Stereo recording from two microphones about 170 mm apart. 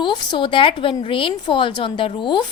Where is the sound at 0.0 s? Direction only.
25° left (ahead or behind).